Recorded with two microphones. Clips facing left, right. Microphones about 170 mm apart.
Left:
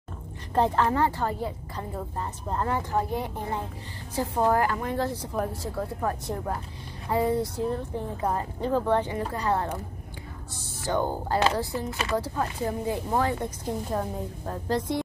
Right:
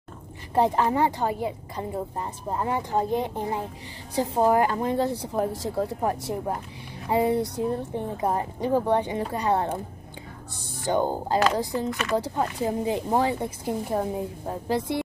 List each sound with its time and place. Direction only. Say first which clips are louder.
0.6 s a woman's voice: right 2 dB; 15° right (ahead or behind)
10.8 s a woman's voice: right 3 dB; 20° right (ahead or behind)
11.9 s speech: right 1 dB; 30° left (ahead or behind)
12.2 s a woman's voice: right 2 dB; 20° right (ahead or behind)